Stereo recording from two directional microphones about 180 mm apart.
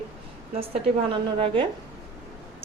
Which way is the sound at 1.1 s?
30° right (ahead or behind).